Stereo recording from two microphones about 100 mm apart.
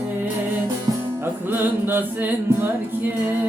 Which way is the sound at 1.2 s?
20° right (ahead or behind).